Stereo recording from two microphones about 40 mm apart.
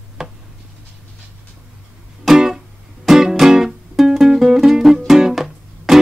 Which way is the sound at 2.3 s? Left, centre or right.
Centre.